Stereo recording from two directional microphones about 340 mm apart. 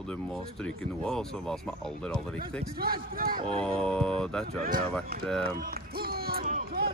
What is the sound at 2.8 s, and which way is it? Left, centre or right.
Speech, right.